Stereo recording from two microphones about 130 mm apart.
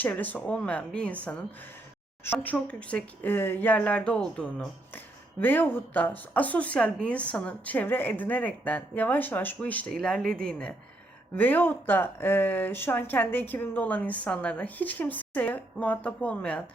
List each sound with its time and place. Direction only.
0.0 s speech: 10° left (ahead or behind)